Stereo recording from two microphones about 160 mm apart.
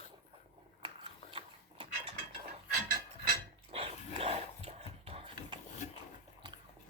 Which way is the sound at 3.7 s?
40° right (ahead or behind).